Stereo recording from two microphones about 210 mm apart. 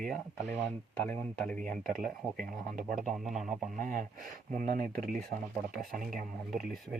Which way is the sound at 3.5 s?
40° right (ahead or behind).